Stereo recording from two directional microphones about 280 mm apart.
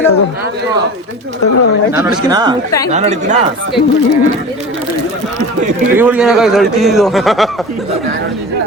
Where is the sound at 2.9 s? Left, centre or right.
Right.